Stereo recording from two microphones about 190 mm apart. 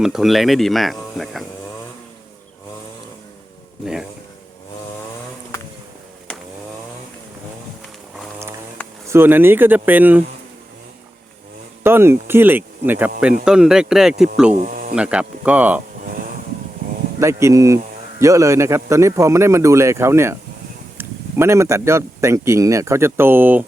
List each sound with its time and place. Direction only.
0.0 s speech: centre (ahead or behind)
9.0 s speech: 10° right (ahead or behind)
11.8 s speech: 10° right (ahead or behind)
14.5 s speech: 45° right (ahead or behind)
14.9 s speech: 5° right (ahead or behind)
16.0 s vehicle: 45° right (ahead or behind)
17.2 s speech: 15° right (ahead or behind)